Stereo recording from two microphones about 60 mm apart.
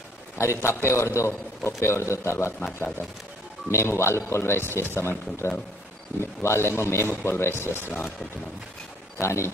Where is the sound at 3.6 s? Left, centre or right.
Left.